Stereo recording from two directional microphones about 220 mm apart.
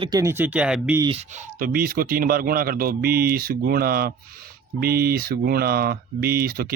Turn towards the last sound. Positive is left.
turn(degrees=-45)  # may be behind; listen again after turning